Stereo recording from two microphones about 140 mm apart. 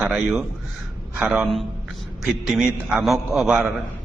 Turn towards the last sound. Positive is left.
turn(degrees=-5)  # may be behind; listen again after turning